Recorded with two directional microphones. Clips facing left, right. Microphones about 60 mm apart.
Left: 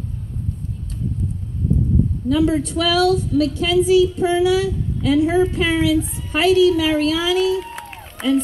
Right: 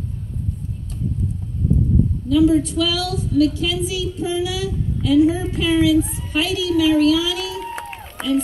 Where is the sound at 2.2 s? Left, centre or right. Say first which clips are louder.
Right 3 dB; left.